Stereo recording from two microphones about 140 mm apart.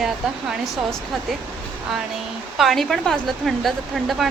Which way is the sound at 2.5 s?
Centre (ahead or behind).